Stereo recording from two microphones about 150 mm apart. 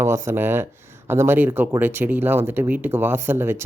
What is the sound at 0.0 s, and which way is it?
Speech, 15° right (ahead or behind).